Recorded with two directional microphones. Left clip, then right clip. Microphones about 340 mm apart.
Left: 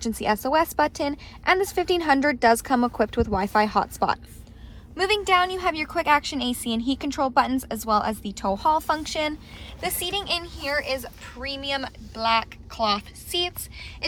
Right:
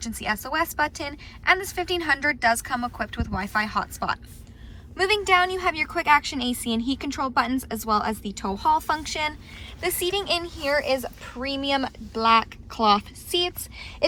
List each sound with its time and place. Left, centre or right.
0.0 s a woman's voice: centre